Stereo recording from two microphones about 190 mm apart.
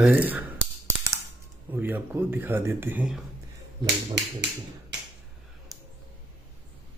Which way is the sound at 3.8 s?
65° right (ahead or behind).